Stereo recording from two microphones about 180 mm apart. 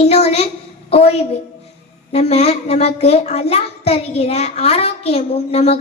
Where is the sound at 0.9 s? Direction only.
35° left (ahead or behind).